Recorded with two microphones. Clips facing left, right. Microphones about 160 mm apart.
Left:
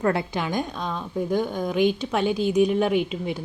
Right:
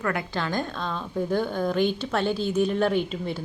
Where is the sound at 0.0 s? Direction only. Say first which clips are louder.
Left 5 dB; 30° left (ahead or behind).